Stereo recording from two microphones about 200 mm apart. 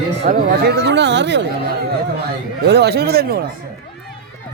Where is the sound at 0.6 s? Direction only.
55° right (ahead or behind).